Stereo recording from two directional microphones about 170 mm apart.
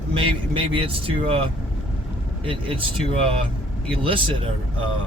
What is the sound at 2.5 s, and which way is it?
Speech, 30° right (ahead or behind).